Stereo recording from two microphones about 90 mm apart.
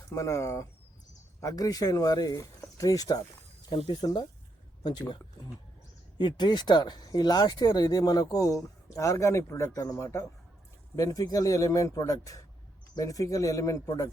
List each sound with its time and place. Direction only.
0.1 s speech: 35° left (ahead or behind)
3.7 s speech: 90° left
4.0 s speech: 50° left (ahead or behind)